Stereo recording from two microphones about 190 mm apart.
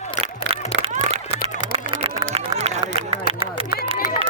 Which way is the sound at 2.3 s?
30° right (ahead or behind).